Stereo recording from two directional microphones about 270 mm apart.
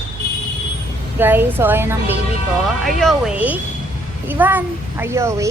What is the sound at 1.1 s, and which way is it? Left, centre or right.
A child's voice, centre.